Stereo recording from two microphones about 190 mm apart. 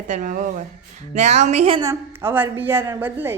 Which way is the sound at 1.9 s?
10° right (ahead or behind).